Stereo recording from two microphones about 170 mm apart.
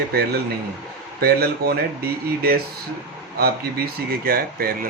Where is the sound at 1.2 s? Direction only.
65° right (ahead or behind).